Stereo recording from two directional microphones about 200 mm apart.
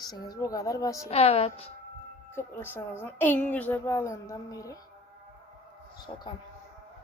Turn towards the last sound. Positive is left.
turn(degrees=20)  # may be behind; listen again after turning